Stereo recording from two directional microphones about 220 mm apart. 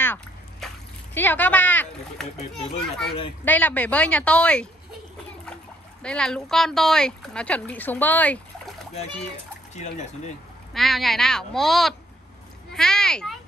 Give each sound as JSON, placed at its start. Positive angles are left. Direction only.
{"t": 0.0, "sound": "a sound", "side_deg": 10}
{"t": 1.1, "sound": "speech", "side_deg": 10}
{"t": 2.2, "sound": "speech", "side_deg": 30}
{"t": 3.4, "sound": "speech", "side_deg": 5}
{"t": 6.0, "sound": "speech", "side_deg": 5}
{"t": 9.8, "sound": "speech", "side_deg": 30}
{"t": 10.7, "sound": "speech", "side_deg": 0}